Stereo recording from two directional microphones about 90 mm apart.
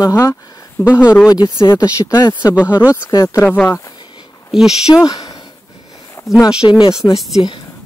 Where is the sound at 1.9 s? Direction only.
45° left (ahead or behind).